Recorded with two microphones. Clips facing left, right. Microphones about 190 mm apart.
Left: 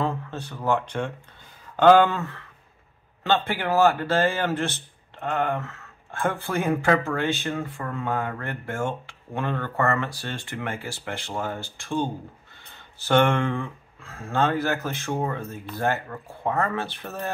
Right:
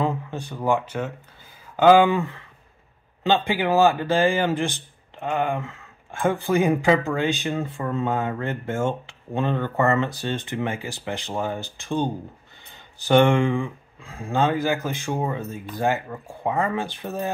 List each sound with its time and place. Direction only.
0.0 s speech: 15° right (ahead or behind)